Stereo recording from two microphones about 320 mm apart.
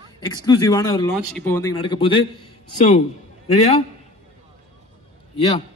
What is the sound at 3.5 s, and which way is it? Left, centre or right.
Speech, centre.